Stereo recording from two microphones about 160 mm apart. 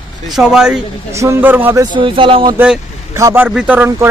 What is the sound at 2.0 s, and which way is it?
Speech, 30° right (ahead or behind).